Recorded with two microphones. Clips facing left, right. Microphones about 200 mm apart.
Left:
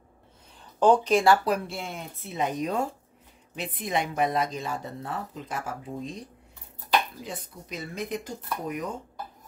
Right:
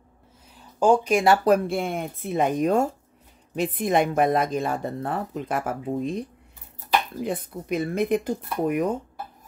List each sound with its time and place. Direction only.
0.7 s speech: 10° right (ahead or behind)
1.4 s a woman's voice: 50° right (ahead or behind)